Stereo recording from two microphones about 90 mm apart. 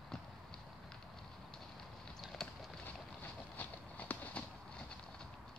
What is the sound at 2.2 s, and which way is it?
Clip-clop, centre (ahead or behind).